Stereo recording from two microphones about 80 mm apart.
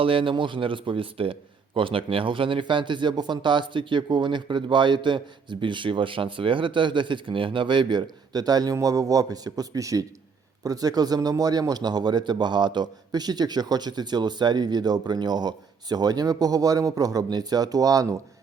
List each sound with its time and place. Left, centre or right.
0.0 s a man's voice: right
8.3 s a man's voice: right